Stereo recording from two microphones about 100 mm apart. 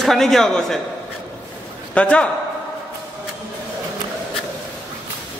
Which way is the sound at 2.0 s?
10° left (ahead or behind).